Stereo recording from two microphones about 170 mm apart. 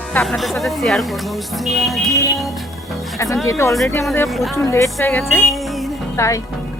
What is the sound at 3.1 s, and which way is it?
Speech, 20° left (ahead or behind).